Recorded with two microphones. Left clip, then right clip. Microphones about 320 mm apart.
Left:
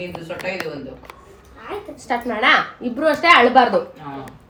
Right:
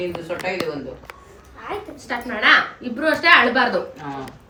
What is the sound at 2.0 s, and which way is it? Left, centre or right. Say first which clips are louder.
A woman's voice: left 1 dB; left.